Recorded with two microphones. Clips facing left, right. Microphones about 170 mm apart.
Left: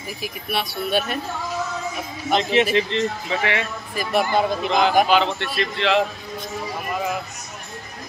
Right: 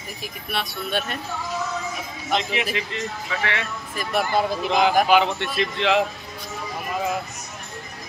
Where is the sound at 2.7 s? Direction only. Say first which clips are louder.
Left 8 dB; 25° left (ahead or behind).